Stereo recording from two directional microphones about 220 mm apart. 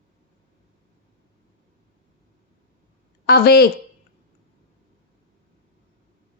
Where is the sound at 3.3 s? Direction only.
45° left (ahead or behind).